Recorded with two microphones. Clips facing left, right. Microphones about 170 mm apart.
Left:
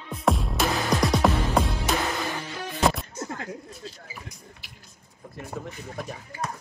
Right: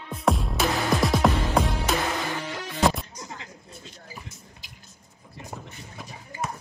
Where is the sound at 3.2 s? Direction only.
50° left (ahead or behind).